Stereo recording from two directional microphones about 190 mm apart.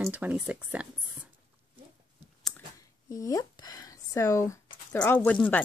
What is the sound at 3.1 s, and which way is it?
Speech, 20° left (ahead or behind).